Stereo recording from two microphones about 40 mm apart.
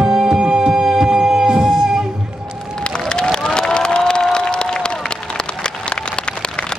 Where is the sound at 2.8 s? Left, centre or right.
Centre.